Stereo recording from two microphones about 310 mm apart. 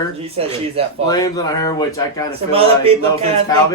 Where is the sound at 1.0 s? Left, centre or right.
Centre.